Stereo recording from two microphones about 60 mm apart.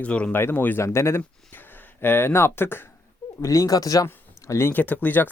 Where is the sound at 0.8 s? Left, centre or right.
Left.